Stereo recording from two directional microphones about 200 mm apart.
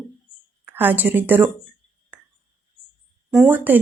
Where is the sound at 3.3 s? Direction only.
5° right (ahead or behind).